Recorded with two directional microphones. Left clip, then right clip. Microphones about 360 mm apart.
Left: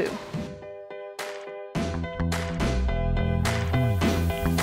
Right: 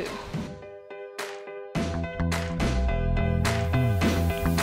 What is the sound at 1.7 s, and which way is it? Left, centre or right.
Music, centre.